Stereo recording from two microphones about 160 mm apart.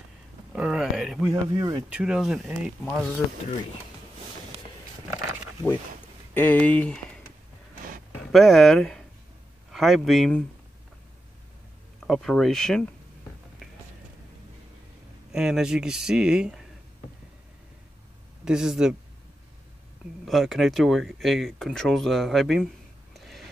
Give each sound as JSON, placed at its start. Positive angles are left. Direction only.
{"t": 0.6, "sound": "a sound", "side_deg": -5}
{"t": 1.3, "sound": "speech", "side_deg": -25}
{"t": 1.9, "sound": "speech", "side_deg": -5}
{"t": 6.3, "sound": "speech", "side_deg": 10}
{"t": 8.2, "sound": "a man's voice", "side_deg": 0}
{"t": 12.0, "sound": "speech", "side_deg": 0}
{"t": 15.3, "sound": "speech", "side_deg": -5}
{"t": 18.4, "sound": "speech", "side_deg": -5}
{"t": 20.2, "sound": "speech", "side_deg": 0}
{"t": 23.1, "sound": "a sound", "side_deg": 0}